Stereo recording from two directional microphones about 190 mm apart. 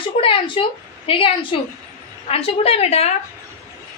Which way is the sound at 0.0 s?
25° left (ahead or behind).